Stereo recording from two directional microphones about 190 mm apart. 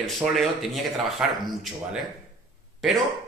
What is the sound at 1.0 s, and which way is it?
Speech, centre (ahead or behind).